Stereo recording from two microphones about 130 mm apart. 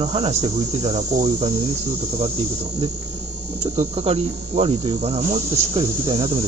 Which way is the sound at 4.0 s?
50° right (ahead or behind).